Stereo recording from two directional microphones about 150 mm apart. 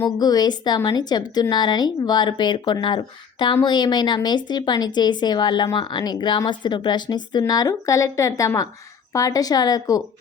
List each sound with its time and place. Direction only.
0.0 s speech: 25° left (ahead or behind)